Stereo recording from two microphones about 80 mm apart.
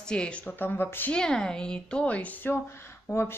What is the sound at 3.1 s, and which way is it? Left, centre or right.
Speech, left.